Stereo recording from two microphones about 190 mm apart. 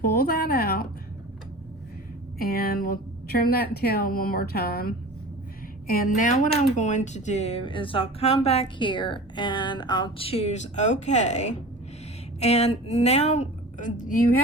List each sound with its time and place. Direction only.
0.0 s speech: 50° left (ahead or behind)
2.4 s a woman's voice: 50° left (ahead or behind)